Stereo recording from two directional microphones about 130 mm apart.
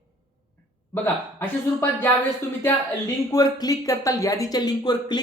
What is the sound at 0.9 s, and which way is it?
Speech, 15° left (ahead or behind).